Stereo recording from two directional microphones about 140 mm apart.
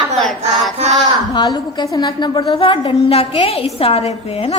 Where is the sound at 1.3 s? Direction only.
30° left (ahead or behind).